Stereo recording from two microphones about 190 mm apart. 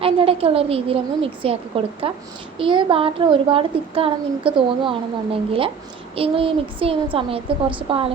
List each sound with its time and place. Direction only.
0.0 s a woman's voice: 30° right (ahead or behind)